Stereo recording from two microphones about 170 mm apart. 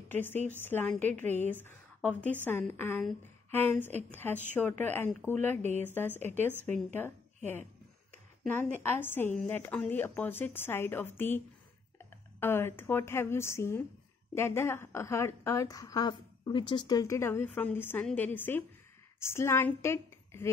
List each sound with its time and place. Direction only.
0.1 s a woman's voice: 10° left (ahead or behind)
1.2 s speech: 45° right (ahead or behind)
1.5 s a woman's voice: 10° left (ahead or behind)
5.6 s speech: 40° right (ahead or behind)
5.9 s a woman's voice: 10° left (ahead or behind)
8.8 s a woman's voice: 10° left (ahead or behind)